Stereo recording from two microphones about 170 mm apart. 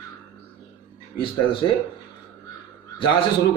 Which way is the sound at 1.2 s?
30° left (ahead or behind).